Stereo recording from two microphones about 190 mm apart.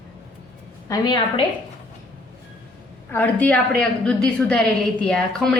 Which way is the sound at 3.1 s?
10° left (ahead or behind).